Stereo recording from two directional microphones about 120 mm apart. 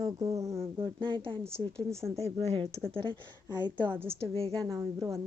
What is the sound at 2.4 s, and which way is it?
Speech, 55° right (ahead or behind).